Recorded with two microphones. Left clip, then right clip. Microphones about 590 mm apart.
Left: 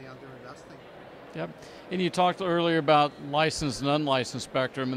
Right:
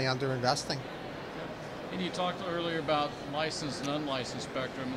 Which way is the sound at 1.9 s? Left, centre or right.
Left.